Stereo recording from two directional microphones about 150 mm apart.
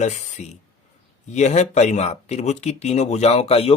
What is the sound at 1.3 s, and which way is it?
Speech, 50° left (ahead or behind).